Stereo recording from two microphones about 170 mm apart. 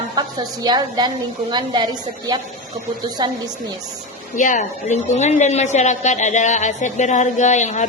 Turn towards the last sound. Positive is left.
turn(degrees=45)  # may be behind; listen again after turning